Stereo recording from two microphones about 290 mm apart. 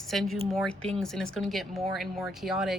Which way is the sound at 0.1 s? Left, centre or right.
Centre.